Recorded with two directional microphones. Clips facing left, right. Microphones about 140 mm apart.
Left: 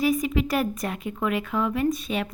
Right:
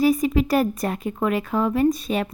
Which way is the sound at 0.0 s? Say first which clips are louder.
Right 4 dB; 35° right (ahead or behind).